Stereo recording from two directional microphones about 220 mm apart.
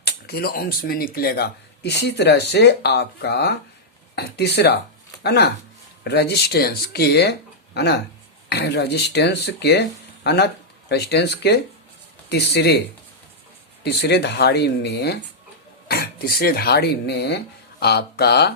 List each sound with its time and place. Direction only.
0.0 s speech: 45° left (ahead or behind)
13.8 s speech: 50° left (ahead or behind)